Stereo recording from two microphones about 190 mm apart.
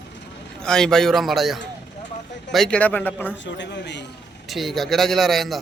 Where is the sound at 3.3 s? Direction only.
70° left (ahead or behind).